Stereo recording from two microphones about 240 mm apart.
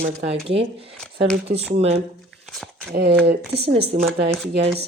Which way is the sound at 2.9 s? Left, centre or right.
Right.